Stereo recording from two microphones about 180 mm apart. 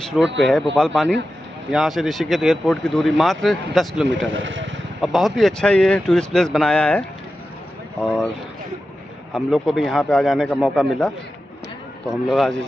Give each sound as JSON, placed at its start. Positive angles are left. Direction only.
{"t": 0.4, "sound": "speech", "side_deg": 0}
{"t": 4.3, "sound": "speech", "side_deg": -90}
{"t": 5.0, "sound": "speech", "side_deg": 0}
{"t": 9.3, "sound": "speech", "side_deg": 0}
{"t": 12.3, "sound": "speech", "side_deg": 0}